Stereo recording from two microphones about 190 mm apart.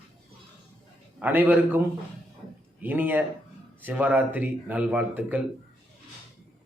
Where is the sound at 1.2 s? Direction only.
10° right (ahead or behind).